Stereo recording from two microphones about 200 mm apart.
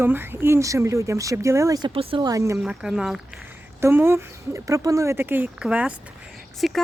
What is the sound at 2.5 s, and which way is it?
Speech, 5° right (ahead or behind).